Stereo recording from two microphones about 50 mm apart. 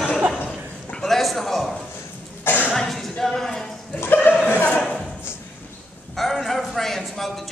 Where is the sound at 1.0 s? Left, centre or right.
Centre.